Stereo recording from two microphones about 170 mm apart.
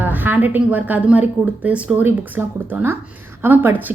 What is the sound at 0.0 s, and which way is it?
A woman's voice, 10° right (ahead or behind).